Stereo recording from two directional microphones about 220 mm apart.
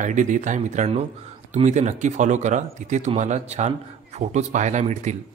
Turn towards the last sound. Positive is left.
turn(degrees=-35)  # may be behind; listen again after turning